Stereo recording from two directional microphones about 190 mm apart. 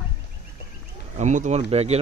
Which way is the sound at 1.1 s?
40° right (ahead or behind).